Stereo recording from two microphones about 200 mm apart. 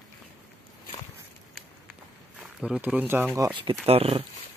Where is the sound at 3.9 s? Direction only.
30° right (ahead or behind).